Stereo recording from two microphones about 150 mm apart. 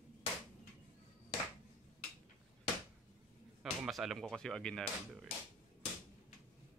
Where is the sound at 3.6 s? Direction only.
5° right (ahead or behind).